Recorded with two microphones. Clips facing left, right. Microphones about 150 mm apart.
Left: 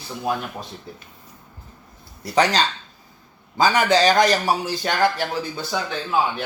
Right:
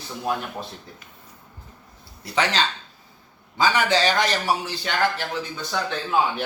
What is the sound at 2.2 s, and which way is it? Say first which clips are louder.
A man's voice: left 4 dB; 40° left (ahead or behind).